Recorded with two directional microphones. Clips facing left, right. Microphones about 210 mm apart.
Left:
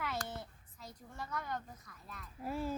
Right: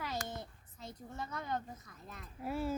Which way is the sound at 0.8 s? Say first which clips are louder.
Right 3 dB; 25° right (ahead or behind).